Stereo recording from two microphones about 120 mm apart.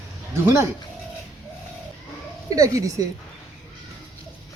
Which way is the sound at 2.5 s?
30° right (ahead or behind).